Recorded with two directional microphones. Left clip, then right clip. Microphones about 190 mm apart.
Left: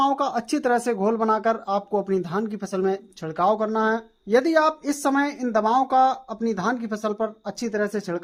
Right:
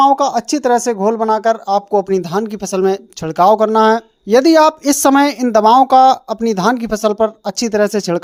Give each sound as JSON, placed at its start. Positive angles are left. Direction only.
{"t": 0.0, "sound": "speech", "side_deg": -20}